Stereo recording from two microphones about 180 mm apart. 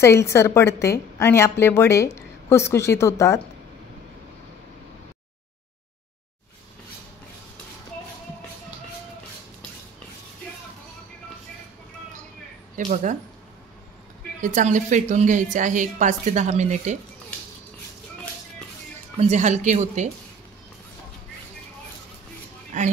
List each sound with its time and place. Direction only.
0.0 s a woman's voice: 15° left (ahead or behind)
12.7 s speech: 45° right (ahead or behind)
14.4 s a woman's voice: 45° right (ahead or behind)
19.1 s speech: 40° right (ahead or behind)
22.7 s a woman's voice: 45° right (ahead or behind)